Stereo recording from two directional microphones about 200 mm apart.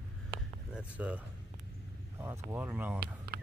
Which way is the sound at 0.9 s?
5° right (ahead or behind).